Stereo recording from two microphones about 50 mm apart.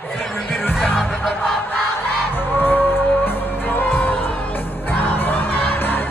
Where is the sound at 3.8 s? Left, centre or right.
Left.